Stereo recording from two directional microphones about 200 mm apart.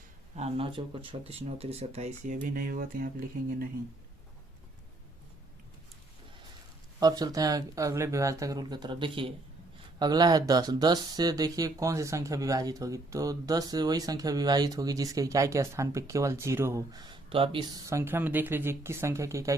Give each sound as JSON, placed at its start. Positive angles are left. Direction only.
{"t": 0.3, "sound": "speech", "side_deg": -30}
{"t": 7.0, "sound": "speech", "side_deg": -20}